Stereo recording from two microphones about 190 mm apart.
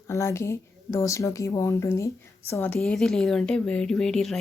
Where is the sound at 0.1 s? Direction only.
15° left (ahead or behind).